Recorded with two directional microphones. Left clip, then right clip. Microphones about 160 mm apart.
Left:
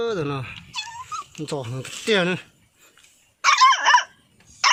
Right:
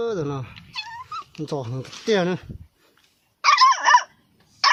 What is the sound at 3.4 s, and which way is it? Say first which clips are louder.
Dog: even; 15° right (ahead or behind).